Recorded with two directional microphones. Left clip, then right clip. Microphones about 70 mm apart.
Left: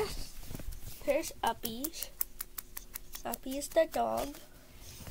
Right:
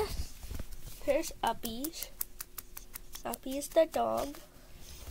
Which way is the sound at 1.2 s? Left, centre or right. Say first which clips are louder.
Even; right.